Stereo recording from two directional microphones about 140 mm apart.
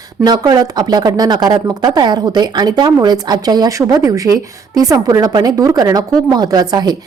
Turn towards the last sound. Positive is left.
turn(degrees=-30)  # may be behind; listen again after turning